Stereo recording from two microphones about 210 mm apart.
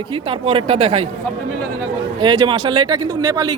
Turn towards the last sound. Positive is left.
turn(degrees=-20)  # may be behind; listen again after turning